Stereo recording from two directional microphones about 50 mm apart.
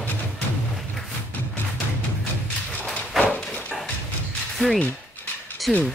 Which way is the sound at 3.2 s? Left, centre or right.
Left.